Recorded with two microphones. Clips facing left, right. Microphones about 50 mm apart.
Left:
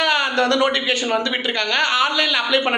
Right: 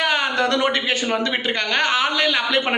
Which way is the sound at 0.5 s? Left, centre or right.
Right.